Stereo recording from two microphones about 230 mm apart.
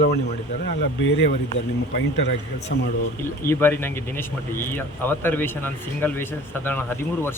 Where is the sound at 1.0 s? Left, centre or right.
Left.